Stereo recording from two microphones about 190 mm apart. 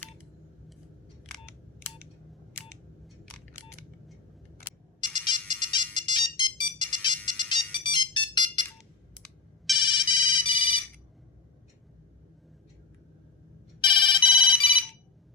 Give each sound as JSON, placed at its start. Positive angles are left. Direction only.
{"t": 4.9, "sound": "ringtone", "side_deg": 25}
{"t": 9.7, "sound": "ringtone", "side_deg": 25}
{"t": 13.8, "sound": "telephone bell ringing", "side_deg": 25}